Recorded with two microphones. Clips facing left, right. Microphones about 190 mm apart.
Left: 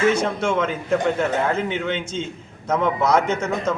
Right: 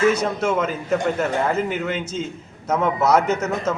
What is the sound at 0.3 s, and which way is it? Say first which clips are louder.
A man's voice: even; 5° right (ahead or behind).